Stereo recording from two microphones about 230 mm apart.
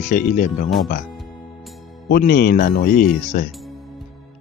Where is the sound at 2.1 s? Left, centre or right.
Left.